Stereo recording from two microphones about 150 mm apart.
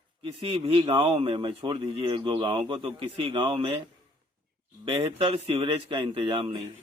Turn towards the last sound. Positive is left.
turn(degrees=-35)  # may be behind; listen again after turning